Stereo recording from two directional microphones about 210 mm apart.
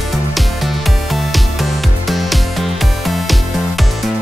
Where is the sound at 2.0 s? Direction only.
Centre (ahead or behind).